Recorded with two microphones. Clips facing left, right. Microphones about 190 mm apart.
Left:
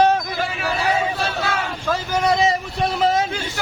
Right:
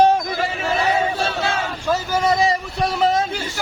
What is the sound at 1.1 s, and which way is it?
Battle cry, 25° right (ahead or behind).